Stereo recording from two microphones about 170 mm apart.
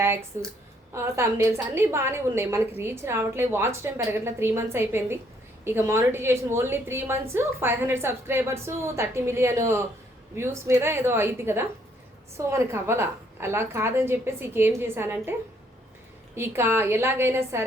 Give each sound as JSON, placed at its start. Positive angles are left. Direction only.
{"t": 0.3, "sound": "a woman's voice", "side_deg": -15}